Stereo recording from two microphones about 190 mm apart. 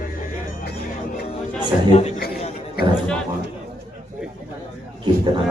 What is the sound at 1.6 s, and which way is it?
Speech, 30° left (ahead or behind).